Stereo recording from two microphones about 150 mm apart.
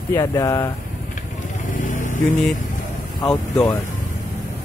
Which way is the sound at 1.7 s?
60° left (ahead or behind).